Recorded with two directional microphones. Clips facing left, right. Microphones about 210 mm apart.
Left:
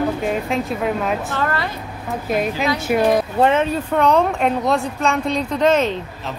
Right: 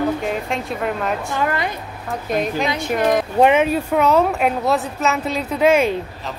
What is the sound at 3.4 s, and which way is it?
Speech, 10° right (ahead or behind).